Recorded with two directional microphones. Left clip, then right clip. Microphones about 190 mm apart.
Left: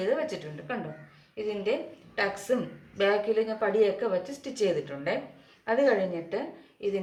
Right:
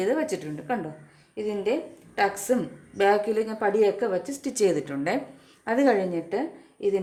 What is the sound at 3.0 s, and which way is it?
A woman's voice, 60° right (ahead or behind).